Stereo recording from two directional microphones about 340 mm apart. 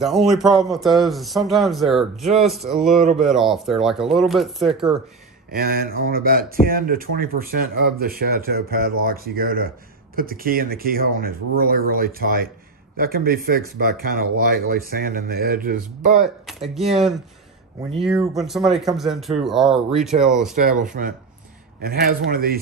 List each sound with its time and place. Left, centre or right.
0.0 s a man's voice: centre
5.5 s speech: right
16.4 s a man's voice: centre
20.5 s speech: right